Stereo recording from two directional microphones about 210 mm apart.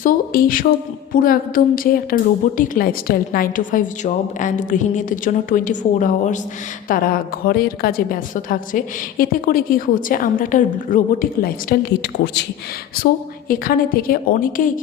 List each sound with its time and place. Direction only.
0.0 s a woman's voice: 40° left (ahead or behind)
13.5 s a woman's voice: 45° left (ahead or behind)